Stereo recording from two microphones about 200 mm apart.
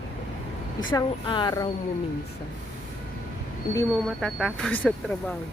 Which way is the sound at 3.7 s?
15° left (ahead or behind).